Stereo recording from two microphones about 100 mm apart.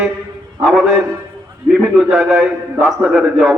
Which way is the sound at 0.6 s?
Centre (ahead or behind).